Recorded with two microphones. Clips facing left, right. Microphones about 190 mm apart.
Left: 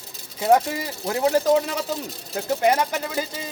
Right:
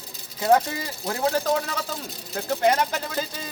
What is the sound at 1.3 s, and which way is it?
A man's voice, 20° left (ahead or behind).